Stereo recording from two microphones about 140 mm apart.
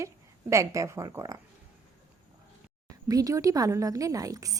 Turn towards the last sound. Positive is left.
turn(degrees=-25)  # may be behind; listen again after turning